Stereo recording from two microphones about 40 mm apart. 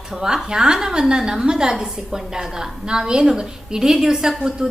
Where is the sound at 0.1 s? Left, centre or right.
Centre.